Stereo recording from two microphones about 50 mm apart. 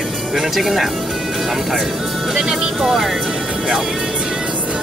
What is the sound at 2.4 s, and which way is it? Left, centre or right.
Speech, centre.